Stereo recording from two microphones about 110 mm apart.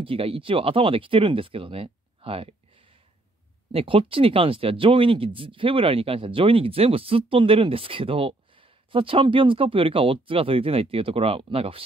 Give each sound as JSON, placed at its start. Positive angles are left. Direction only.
{"t": 0.0, "sound": "speech", "side_deg": -55}
{"t": 3.7, "sound": "speech", "side_deg": -55}